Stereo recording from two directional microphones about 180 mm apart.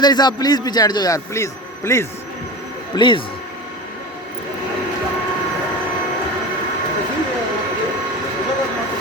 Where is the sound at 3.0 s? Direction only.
25° left (ahead or behind).